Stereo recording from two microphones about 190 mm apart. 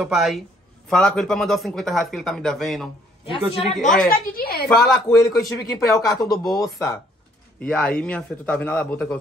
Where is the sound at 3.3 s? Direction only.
30° left (ahead or behind).